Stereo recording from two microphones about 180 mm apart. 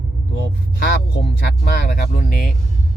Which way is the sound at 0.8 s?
65° left (ahead or behind).